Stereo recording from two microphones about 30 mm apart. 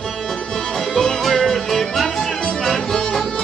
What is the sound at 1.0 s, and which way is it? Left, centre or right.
Music, centre.